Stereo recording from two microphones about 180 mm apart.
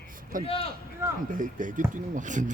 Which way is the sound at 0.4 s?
30° left (ahead or behind).